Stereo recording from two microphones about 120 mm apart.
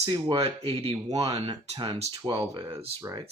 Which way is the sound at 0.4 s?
55° right (ahead or behind).